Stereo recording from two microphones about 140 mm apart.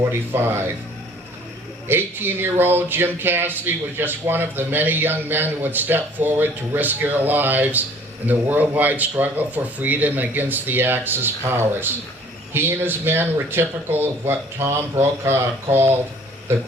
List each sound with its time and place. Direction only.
0.0 s speech: 15° right (ahead or behind)
1.9 s speech: 15° right (ahead or behind)